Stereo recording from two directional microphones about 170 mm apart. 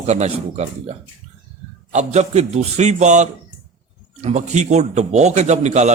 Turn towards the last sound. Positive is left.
turn(degrees=-45)  # may be behind; listen again after turning